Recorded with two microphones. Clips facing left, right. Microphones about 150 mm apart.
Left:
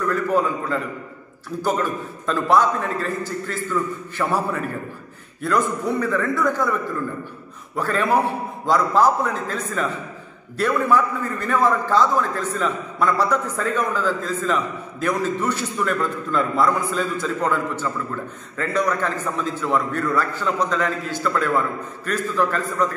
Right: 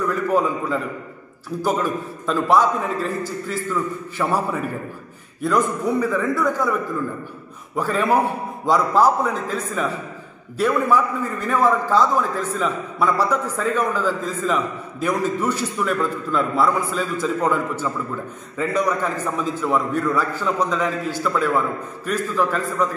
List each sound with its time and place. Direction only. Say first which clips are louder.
0.1 s a man's voice: left 1 dB; 5° right (ahead or behind)
7.7 s a man's voice: right 1 dB; 5° right (ahead or behind)